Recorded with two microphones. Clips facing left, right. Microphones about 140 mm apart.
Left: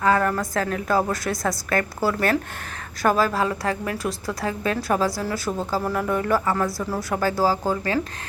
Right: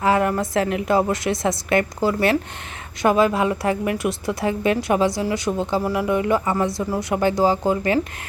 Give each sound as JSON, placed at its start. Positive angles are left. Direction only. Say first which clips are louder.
{"t": 0.0, "sound": "a woman's voice", "louder": "right 2 dB", "side_deg": -20}
{"t": 5.5, "sound": "speech", "louder": "right 2 dB", "side_deg": 5}
{"t": 5.8, "sound": "speech", "louder": "right 3 dB", "side_deg": -10}
{"t": 6.3, "sound": "a woman's voice", "louder": "right 2 dB", "side_deg": -20}